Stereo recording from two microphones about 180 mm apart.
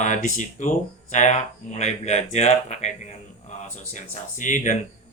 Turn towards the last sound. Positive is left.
turn(degrees=45)  # may be behind; listen again after turning